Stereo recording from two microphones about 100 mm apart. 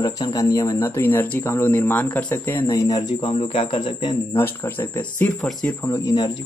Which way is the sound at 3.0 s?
55° left (ahead or behind).